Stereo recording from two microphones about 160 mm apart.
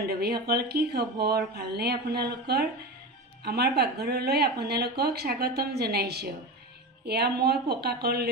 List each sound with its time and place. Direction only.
0.0 s speech: 80° right